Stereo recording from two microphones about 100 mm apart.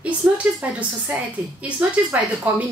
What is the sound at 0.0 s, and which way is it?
A woman's voice, 15° right (ahead or behind).